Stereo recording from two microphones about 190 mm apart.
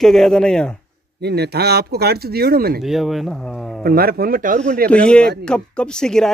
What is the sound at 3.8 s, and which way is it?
Speech, 50° right (ahead or behind).